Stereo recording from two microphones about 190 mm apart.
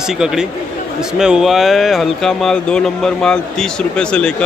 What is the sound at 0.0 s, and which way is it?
A man's voice, 5° right (ahead or behind).